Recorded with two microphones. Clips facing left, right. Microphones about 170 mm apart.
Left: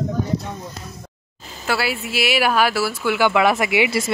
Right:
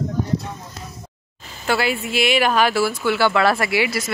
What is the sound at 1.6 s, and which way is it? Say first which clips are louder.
Speech: right 2 dB; 5° left (ahead or behind).